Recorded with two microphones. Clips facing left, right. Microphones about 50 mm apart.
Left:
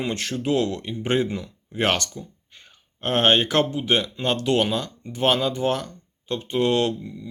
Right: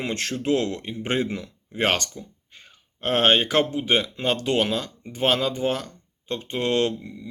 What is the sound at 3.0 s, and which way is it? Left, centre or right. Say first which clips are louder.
Speech: even; centre.